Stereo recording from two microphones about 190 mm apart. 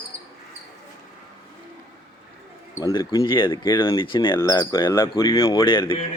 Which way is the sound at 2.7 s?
15° left (ahead or behind).